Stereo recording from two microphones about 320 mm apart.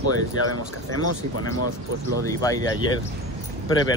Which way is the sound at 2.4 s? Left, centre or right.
Centre.